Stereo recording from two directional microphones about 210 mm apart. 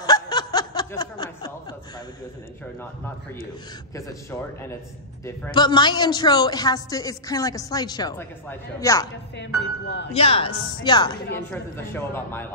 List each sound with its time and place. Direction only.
0.0 s snicker: 20° left (ahead or behind)
3.9 s a man's voice: 15° left (ahead or behind)
9.8 s speech: 60° left (ahead or behind)
10.1 s a woman's voice: 25° left (ahead or behind)
11.3 s a man's voice: 10° left (ahead or behind)